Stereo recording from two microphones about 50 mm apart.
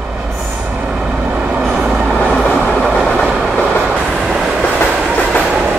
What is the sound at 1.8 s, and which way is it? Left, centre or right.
Train, centre.